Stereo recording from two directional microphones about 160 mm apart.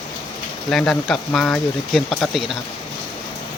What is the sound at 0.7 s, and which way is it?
Speech, 5° left (ahead or behind).